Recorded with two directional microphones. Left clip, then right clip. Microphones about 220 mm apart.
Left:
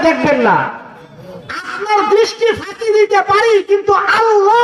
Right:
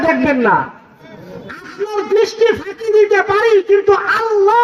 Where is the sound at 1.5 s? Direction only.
45° right (ahead or behind).